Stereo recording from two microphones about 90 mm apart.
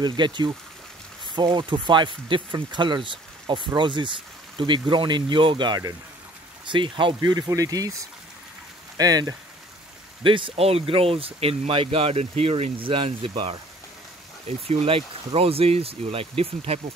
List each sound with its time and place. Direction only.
0.0 s speech: 60° right (ahead or behind)
7.2 s speech: 45° right (ahead or behind)
10.2 s speech: 70° right (ahead or behind)
14.5 s speech: 90° right